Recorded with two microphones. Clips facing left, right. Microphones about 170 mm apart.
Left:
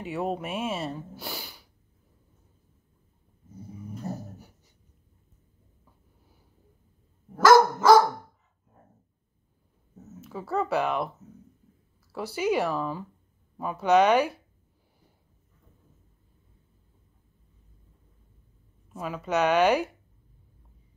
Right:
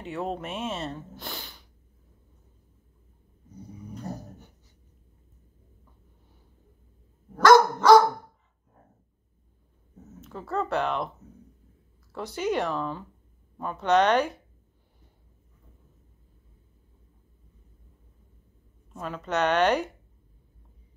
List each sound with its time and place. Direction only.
0.0 s speech: 10° left (ahead or behind)
3.5 s dog: 5° left (ahead or behind)
7.3 s dog: 5° left (ahead or behind)
10.2 s speech: 5° left (ahead or behind)
18.9 s speech: 5° left (ahead or behind)